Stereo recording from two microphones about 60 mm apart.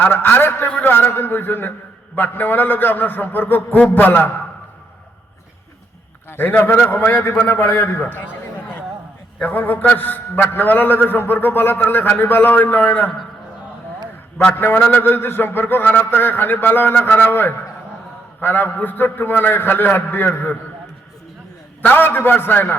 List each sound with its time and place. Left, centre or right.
0.0 s a man's voice: left
6.3 s a man's voice: left
8.1 s chatter: left
9.4 s a man's voice: left
14.5 s a man's voice: left
14.8 s a man's voice: left
21.8 s a man's voice: left